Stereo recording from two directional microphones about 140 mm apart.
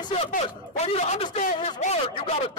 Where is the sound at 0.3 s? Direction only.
50° left (ahead or behind).